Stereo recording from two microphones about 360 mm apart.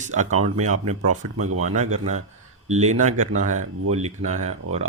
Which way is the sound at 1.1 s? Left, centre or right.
Right.